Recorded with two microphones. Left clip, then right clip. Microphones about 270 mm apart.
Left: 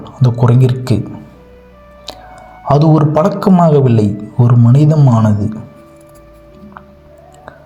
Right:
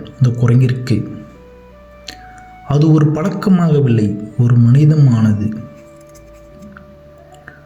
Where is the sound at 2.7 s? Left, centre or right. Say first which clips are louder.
Left 4 dB; centre.